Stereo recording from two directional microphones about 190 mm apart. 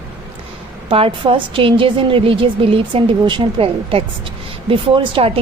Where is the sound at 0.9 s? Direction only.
30° right (ahead or behind).